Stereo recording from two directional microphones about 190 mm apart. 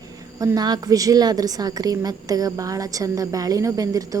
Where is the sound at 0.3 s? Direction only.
20° right (ahead or behind).